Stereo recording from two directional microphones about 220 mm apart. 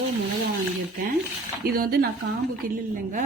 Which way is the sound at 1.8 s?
45° right (ahead or behind).